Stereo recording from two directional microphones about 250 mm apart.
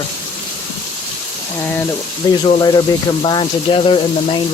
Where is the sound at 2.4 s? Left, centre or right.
Centre.